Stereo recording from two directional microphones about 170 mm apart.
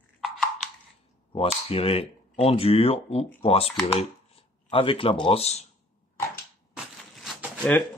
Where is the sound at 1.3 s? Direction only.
35° left (ahead or behind).